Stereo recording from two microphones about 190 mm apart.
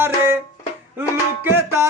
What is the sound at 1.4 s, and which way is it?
Music, 15° right (ahead or behind).